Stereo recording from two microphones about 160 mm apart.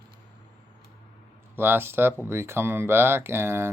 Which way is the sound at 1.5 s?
15° right (ahead or behind).